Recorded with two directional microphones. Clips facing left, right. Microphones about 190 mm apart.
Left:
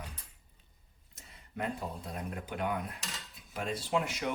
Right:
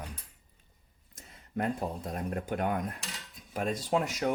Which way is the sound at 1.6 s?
45° right (ahead or behind).